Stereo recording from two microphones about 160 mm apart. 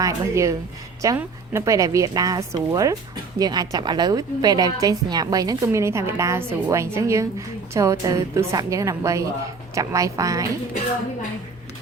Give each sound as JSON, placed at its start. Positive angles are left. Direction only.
{"t": 0.0, "sound": "a woman's voice", "side_deg": -20}